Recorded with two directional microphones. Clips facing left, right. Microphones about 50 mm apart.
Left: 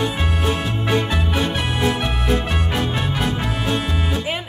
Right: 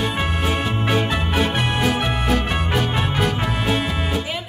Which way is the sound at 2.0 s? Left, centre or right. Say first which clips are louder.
Right 1 dB; centre.